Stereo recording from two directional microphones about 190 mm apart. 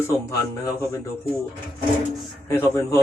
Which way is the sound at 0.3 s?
15° left (ahead or behind).